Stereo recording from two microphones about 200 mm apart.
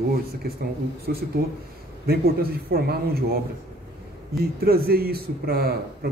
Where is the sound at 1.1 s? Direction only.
50° right (ahead or behind).